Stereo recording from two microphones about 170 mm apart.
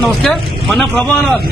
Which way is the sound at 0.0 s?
Centre (ahead or behind).